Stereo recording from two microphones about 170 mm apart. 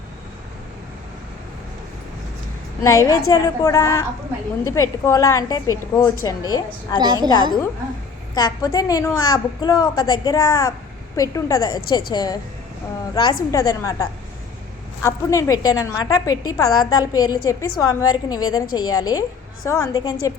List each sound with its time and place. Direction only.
2.8 s a woman's voice: 20° left (ahead or behind)
7.0 s a woman's voice: 25° right (ahead or behind)
8.4 s a woman's voice: 20° left (ahead or behind)